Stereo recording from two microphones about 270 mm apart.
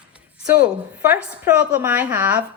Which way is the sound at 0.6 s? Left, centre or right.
Centre.